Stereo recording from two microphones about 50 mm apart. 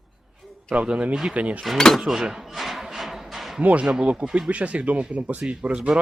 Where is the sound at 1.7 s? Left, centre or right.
Centre.